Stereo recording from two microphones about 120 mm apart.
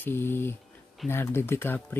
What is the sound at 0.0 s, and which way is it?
Speech, 20° left (ahead or behind).